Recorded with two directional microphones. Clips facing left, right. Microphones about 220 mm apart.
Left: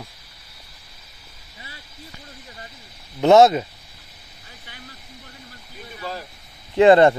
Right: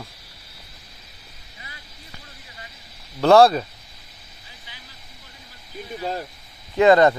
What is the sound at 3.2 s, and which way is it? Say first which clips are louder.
Speech: left 1 dB; 20° left (ahead or behind).